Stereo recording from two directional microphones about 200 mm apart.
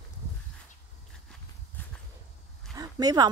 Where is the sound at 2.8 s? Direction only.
20° right (ahead or behind).